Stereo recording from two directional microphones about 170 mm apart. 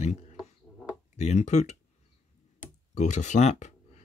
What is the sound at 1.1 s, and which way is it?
Speech, 40° left (ahead or behind).